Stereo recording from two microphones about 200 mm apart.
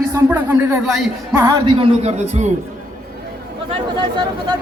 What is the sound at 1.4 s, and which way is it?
Speech, 20° right (ahead or behind).